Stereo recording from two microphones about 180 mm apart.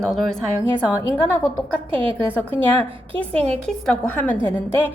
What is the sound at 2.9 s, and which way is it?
Speech, 30° right (ahead or behind).